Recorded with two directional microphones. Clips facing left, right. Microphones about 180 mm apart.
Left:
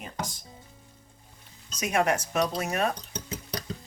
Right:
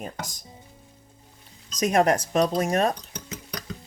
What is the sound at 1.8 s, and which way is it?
Speech, 35° right (ahead or behind).